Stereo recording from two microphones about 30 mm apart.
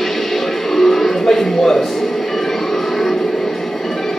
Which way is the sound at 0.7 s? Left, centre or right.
Centre.